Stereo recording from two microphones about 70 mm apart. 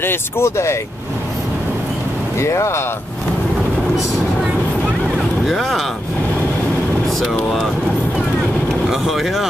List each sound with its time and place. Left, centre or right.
0.0 s speech: left
2.4 s speech: left
5.5 s speech: centre
8.8 s speech: centre